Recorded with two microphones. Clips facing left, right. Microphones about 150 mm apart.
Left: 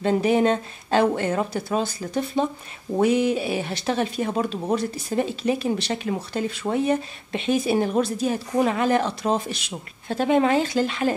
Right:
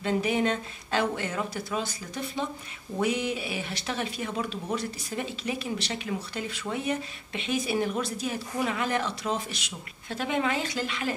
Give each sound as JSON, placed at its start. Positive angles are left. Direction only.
{"t": 0.0, "sound": "speech", "side_deg": 40}
{"t": 3.0, "sound": "speech", "side_deg": 35}